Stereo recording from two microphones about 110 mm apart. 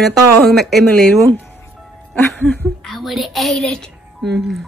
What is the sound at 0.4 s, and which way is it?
Speech, centre (ahead or behind).